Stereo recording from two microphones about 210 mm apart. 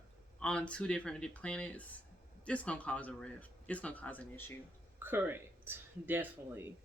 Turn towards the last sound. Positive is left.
turn(degrees=-10)  # may be behind; listen again after turning